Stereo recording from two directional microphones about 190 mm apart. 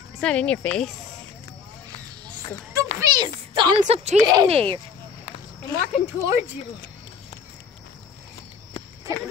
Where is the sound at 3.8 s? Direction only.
35° right (ahead or behind).